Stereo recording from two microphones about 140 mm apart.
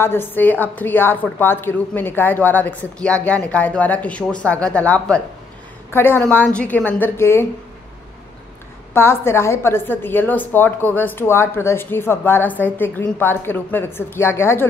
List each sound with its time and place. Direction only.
0.0 s a woman's voice: 15° left (ahead or behind)
8.9 s a woman's voice: 15° left (ahead or behind)